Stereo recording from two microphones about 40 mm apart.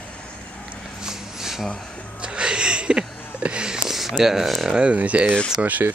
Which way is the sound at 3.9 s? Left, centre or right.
Centre.